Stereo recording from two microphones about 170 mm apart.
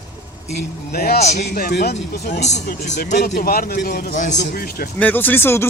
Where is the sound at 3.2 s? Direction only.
60° left (ahead or behind).